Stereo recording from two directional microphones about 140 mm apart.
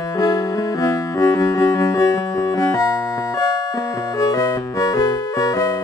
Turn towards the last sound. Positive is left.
turn(degrees=25)  # may be behind; listen again after turning